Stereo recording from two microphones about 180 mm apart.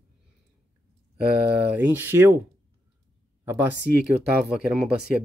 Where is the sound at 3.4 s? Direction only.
10° right (ahead or behind).